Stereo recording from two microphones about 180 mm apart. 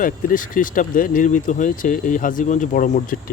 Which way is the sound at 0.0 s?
50° left (ahead or behind).